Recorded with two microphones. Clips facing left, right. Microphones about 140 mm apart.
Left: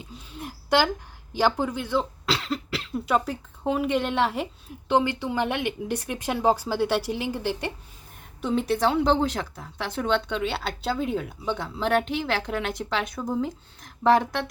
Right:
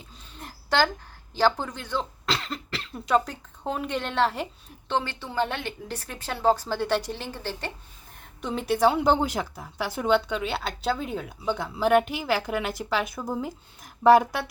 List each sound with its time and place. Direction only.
0.0 s a sound: 10° left (ahead or behind)
1.3 s speech: 10° left (ahead or behind)
8.4 s speech: centre (ahead or behind)